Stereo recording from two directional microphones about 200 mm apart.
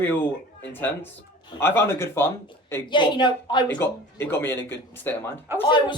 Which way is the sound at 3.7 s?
10° left (ahead or behind).